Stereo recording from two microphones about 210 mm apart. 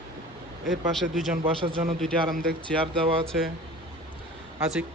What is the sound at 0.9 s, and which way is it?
Speech, centre (ahead or behind).